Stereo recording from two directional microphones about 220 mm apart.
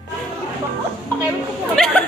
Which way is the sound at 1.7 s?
5° left (ahead or behind).